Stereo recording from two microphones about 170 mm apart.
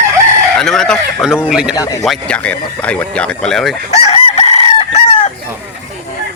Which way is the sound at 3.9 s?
40° left (ahead or behind).